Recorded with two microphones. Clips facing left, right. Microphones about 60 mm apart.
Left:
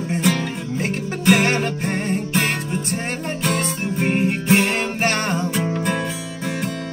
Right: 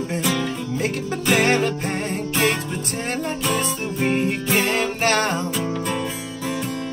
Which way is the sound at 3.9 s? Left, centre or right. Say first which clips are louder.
Left 1 dB; left.